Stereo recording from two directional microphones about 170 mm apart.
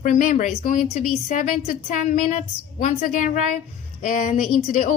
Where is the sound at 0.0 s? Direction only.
50° left (ahead or behind).